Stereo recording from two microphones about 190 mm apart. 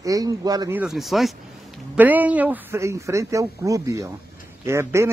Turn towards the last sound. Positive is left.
turn(degrees=-15)  # may be behind; listen again after turning